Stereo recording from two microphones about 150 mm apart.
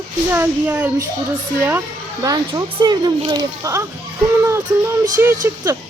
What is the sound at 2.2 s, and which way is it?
Speech, 25° right (ahead or behind).